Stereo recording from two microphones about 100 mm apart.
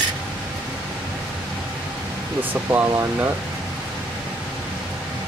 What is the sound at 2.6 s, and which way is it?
Speech, 30° right (ahead or behind).